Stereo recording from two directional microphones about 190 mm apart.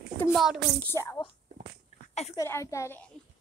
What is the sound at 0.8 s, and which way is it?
Speech, 15° left (ahead or behind).